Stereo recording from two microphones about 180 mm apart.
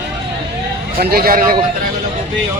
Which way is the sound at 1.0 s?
55° right (ahead or behind).